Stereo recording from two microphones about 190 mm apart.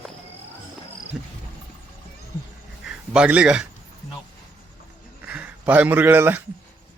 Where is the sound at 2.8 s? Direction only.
5° right (ahead or behind).